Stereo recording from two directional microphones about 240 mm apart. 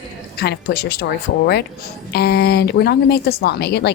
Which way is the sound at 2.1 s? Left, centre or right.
Left.